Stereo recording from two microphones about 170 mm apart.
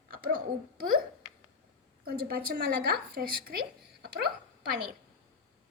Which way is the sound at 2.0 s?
60° right (ahead or behind).